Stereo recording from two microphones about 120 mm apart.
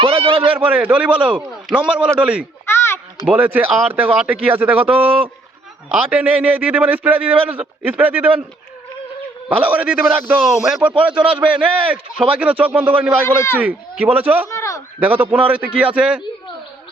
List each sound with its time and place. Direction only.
0.0 s a sound: 50° right (ahead or behind)
0.5 s a man's voice: 10° right (ahead or behind)
2.6 s a sound: 20° left (ahead or behind)
3.2 s a man's voice: 15° right (ahead or behind)
9.6 s a man's voice: 15° right (ahead or behind)
10.4 s a man's voice: 5° right (ahead or behind)
13.2 s a man's voice: 20° left (ahead or behind)
13.6 s a man's voice: 15° right (ahead or behind)
14.5 s a sound: 25° left (ahead or behind)
15.0 s a man's voice: 15° right (ahead or behind)